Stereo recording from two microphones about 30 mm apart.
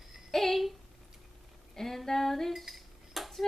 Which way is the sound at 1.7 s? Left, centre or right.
Centre.